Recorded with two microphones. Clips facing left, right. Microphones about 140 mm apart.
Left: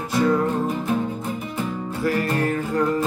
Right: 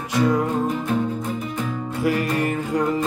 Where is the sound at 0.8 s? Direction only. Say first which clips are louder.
Right 1 dB; 5° left (ahead or behind).